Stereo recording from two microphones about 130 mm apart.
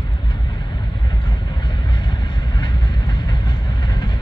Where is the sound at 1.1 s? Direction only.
35° left (ahead or behind).